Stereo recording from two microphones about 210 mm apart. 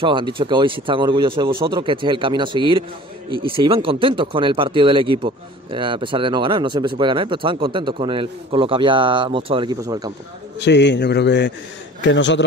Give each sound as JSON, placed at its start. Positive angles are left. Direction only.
{"t": 0.0, "sound": "speech", "side_deg": -25}
{"t": 10.6, "sound": "a man's voice", "side_deg": 55}